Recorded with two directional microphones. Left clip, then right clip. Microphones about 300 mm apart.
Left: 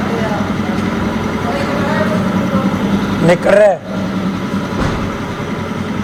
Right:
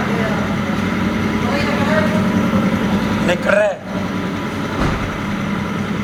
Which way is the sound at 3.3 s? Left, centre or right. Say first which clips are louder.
Left 7 dB; left.